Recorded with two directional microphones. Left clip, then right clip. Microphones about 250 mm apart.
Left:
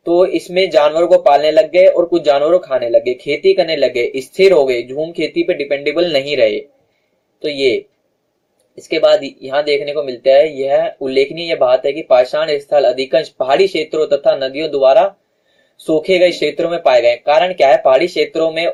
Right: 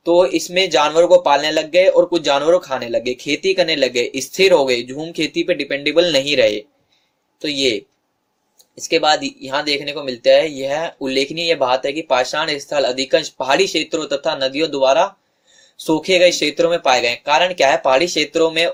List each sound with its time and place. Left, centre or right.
0.0 s speech: right
8.9 s speech: right
16.0 s speech: right